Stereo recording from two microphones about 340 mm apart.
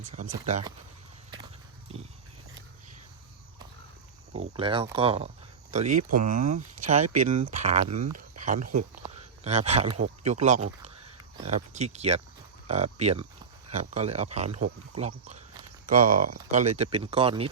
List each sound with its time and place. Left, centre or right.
0.1 s speech: centre
1.9 s speech: centre
4.3 s speech: right
4.5 s speech: centre